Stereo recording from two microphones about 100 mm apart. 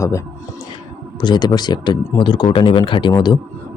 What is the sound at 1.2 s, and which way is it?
Speech, 45° left (ahead or behind).